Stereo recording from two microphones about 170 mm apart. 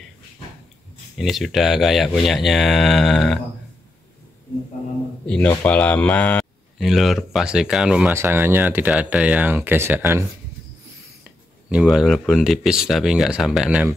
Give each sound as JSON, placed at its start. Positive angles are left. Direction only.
{"t": 1.1, "sound": "speech", "side_deg": 0}
{"t": 5.2, "sound": "speech", "side_deg": 5}
{"t": 11.8, "sound": "speech", "side_deg": 0}